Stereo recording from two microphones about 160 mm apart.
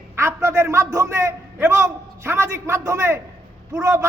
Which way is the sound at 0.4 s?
15° right (ahead or behind).